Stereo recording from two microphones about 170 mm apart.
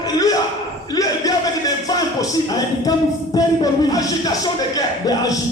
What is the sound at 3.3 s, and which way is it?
Speech, 20° left (ahead or behind).